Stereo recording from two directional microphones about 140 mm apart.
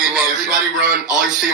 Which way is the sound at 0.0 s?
5° right (ahead or behind).